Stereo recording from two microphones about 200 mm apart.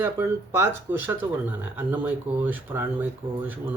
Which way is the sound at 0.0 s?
15° right (ahead or behind).